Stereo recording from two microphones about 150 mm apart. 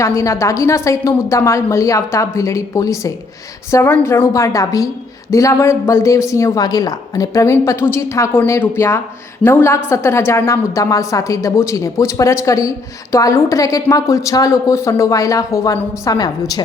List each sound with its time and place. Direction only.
0.0 s a woman's voice: 20° left (ahead or behind)